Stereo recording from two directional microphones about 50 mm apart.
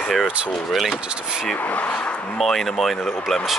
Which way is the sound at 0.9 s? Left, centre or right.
Centre.